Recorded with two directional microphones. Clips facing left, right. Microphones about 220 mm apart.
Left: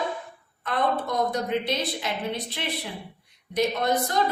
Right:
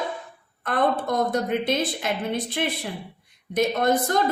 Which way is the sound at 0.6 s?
50° right (ahead or behind).